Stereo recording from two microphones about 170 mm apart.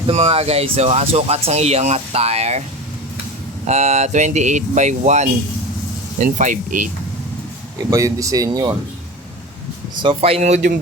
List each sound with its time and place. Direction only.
0.1 s speech: 40° right (ahead or behind)
3.7 s speech: 40° right (ahead or behind)
7.8 s speech: 20° right (ahead or behind)
9.9 s speech: 30° right (ahead or behind)